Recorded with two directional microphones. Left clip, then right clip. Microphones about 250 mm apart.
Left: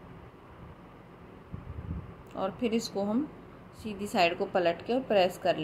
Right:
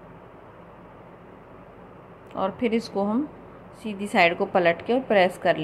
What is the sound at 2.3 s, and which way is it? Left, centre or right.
A woman's voice, centre.